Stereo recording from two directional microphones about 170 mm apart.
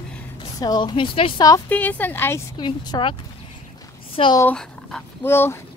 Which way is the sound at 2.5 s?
25° left (ahead or behind).